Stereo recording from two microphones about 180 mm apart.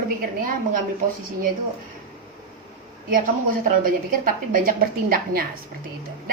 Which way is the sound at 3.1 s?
50° right (ahead or behind).